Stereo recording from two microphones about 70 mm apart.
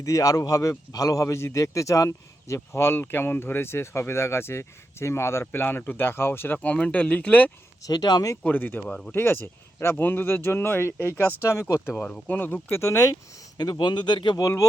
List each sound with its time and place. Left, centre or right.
0.0 s a man's voice: left
6.6 s speech: centre
7.8 s speech: left
8.4 s speech: left
8.9 s speech: centre
9.1 s a man's voice: left
11.9 s speech: centre
12.3 s speech: left
12.7 s speech: left
13.6 s speech: left
14.4 s speech: left